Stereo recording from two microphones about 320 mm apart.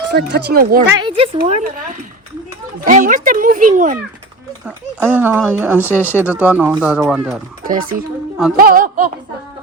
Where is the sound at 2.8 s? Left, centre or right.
Right.